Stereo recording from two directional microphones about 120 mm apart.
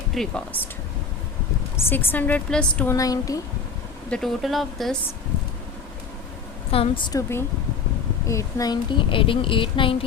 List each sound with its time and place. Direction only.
0.1 s speech: 5° left (ahead or behind)
1.7 s a woman's voice: 20° left (ahead or behind)
2.8 s a woman's voice: 30° left (ahead or behind)
4.1 s speech: 5° left (ahead or behind)
6.7 s a woman's voice: 50° left (ahead or behind)
7.1 s a woman's voice: 25° left (ahead or behind); by 10.0 s 45° left (ahead or behind)